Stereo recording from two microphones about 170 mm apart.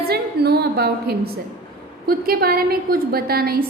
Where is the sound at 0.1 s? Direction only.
70° right (ahead or behind).